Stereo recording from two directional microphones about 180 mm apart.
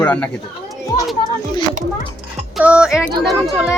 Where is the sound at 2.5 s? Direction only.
5° right (ahead or behind).